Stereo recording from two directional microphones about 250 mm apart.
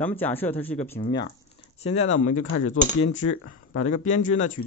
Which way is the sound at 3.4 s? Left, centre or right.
Left.